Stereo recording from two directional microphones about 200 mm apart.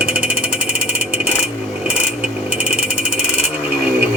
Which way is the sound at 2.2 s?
5° right (ahead or behind).